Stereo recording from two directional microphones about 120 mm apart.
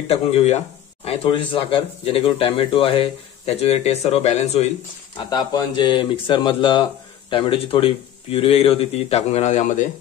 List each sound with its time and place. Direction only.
0.1 s speech: 65° left (ahead or behind)
1.0 s speech: 50° left (ahead or behind)
5.1 s speech: 40° left (ahead or behind); by 9.8 s 90° left